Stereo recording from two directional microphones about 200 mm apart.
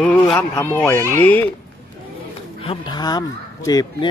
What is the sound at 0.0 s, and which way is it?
Speech, 5° left (ahead or behind).